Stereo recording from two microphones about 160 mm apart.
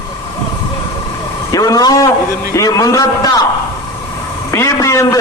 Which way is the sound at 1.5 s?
25° left (ahead or behind).